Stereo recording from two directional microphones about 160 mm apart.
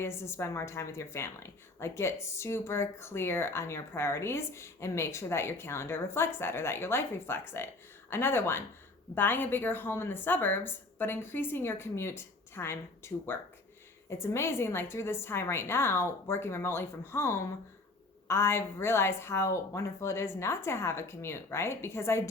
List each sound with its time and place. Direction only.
0.0 s speech: 15° left (ahead or behind)